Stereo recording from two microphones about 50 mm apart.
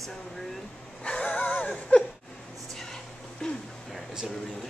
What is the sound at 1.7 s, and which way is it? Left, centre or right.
Speech, centre.